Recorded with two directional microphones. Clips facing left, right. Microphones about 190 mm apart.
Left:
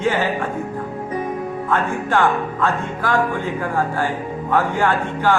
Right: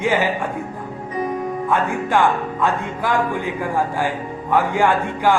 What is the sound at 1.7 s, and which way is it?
Speech, 15° right (ahead or behind).